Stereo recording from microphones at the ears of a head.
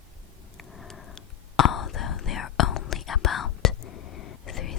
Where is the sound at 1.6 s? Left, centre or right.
Left.